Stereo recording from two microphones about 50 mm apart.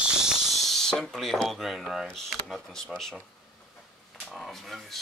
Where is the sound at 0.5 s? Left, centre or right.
Centre.